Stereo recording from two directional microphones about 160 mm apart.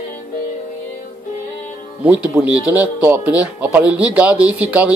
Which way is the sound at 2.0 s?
10° right (ahead or behind).